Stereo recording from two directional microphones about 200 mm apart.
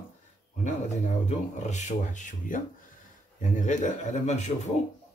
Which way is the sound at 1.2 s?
35° left (ahead or behind).